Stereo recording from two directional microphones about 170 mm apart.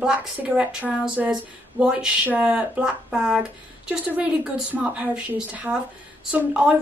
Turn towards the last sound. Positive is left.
turn(degrees=-5)  # may be behind; listen again after turning